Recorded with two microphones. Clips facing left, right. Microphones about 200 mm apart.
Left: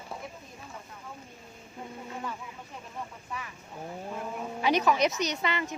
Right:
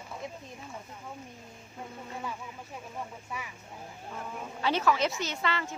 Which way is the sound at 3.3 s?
10° right (ahead or behind).